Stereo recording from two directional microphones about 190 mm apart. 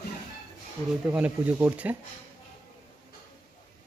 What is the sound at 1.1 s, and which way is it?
Speech, 5° right (ahead or behind).